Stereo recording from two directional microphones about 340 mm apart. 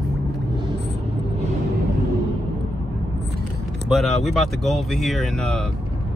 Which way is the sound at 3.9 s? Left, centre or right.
Centre.